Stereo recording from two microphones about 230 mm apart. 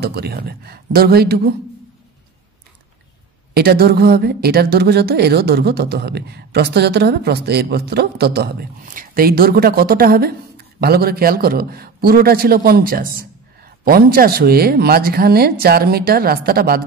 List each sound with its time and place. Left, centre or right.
0.0 s a woman's voice: right
3.5 s a woman's voice: right